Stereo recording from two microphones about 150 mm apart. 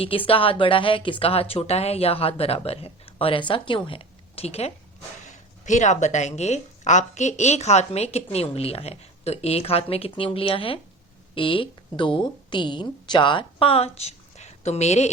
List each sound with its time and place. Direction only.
0.0 s a woman's voice: 35° left (ahead or behind)
5.2 s a woman's voice: 55° left (ahead or behind)